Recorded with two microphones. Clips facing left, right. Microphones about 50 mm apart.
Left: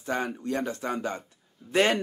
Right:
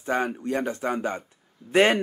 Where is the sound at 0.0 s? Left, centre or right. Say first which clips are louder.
Right 4 dB; right.